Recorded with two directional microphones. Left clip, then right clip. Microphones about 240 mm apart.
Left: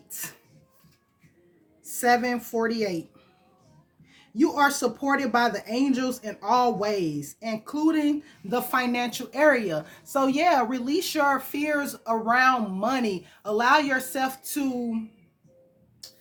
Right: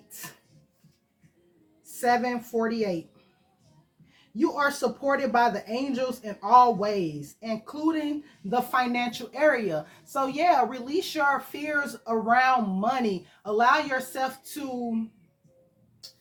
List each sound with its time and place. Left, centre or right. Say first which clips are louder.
0.1 s music: left 4 dB; left
2.0 s speech: left 2 dB; left
4.1 s speech: left 3 dB; left